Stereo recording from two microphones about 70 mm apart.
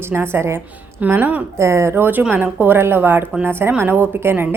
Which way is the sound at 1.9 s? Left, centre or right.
Right.